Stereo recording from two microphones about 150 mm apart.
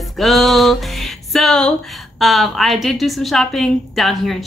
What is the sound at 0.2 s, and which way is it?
Music, centre (ahead or behind).